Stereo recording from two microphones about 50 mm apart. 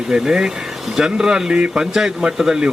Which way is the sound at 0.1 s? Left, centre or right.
Centre.